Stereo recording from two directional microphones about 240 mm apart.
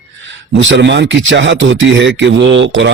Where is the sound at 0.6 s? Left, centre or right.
Right.